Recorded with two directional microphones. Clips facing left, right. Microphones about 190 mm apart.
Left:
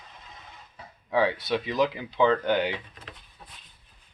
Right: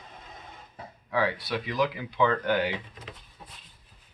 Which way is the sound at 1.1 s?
25° left (ahead or behind).